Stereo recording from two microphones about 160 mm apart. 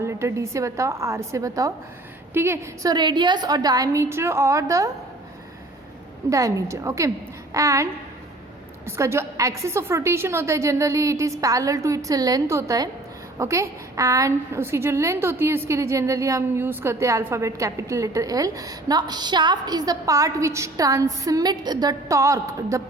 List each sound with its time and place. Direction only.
0.0 s a woman's voice: 15° right (ahead or behind)
2.9 s a woman's voice: 30° right (ahead or behind)
6.3 s a woman's voice: 20° right (ahead or behind)
8.9 s a woman's voice: 15° right (ahead or behind)